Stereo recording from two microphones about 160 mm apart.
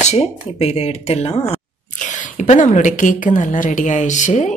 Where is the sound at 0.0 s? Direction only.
45° left (ahead or behind).